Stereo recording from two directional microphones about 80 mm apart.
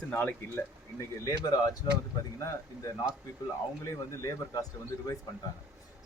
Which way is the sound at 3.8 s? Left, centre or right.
Left.